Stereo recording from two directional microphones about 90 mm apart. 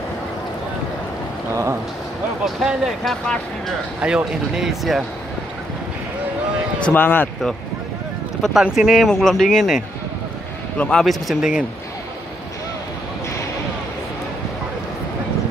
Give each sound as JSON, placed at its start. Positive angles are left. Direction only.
{"t": 1.5, "sound": "a sound", "side_deg": -30}
{"t": 2.4, "sound": "speech", "side_deg": -5}
{"t": 4.0, "sound": "speech", "side_deg": -10}
{"t": 6.8, "sound": "speech", "side_deg": 20}
{"t": 8.4, "sound": "speech", "side_deg": -5}
{"t": 10.8, "sound": "speech", "side_deg": 5}